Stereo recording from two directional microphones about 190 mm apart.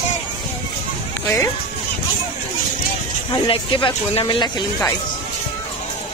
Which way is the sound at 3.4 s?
25° left (ahead or behind).